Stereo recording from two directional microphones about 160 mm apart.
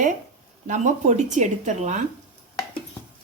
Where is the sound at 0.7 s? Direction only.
50° right (ahead or behind).